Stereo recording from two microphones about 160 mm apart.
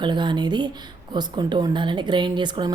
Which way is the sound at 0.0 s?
30° right (ahead or behind).